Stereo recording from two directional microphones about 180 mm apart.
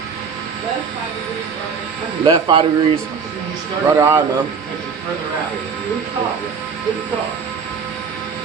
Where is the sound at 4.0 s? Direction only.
15° right (ahead or behind).